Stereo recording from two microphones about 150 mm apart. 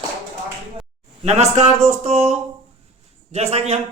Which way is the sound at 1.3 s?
45° right (ahead or behind).